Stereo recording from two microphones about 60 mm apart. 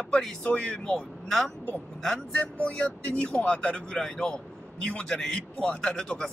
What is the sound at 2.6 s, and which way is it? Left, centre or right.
Speech, left.